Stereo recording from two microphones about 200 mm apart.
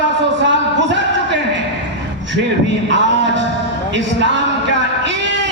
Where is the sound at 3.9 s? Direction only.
65° right (ahead or behind).